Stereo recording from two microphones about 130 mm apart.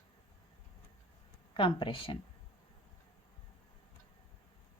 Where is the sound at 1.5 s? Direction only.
40° left (ahead or behind).